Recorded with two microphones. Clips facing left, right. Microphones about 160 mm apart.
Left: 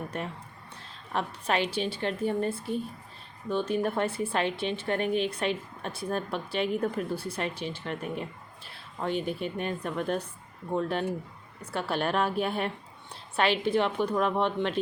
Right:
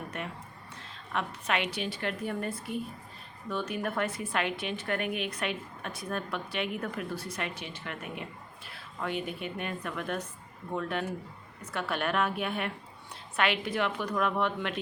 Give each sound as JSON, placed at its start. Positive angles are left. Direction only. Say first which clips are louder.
{"t": 0.1, "sound": "a woman's voice", "louder": "left 3 dB", "side_deg": 35}
{"t": 3.8, "sound": "a woman's voice", "louder": "left 4 dB", "side_deg": 30}